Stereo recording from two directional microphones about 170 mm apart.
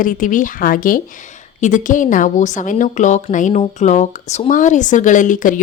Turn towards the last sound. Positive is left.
turn(degrees=50)  # may be behind; listen again after turning